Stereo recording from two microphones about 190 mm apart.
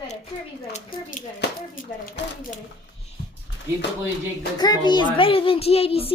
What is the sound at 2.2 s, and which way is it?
Speech, 70° left (ahead or behind).